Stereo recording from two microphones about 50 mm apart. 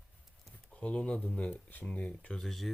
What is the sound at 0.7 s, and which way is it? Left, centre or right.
Speech, left.